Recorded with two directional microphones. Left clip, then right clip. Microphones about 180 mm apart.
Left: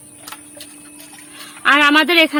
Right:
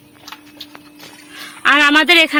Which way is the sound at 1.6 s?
Centre (ahead or behind).